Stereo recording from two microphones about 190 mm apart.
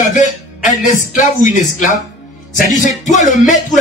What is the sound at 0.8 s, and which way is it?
A man's voice, 40° left (ahead or behind).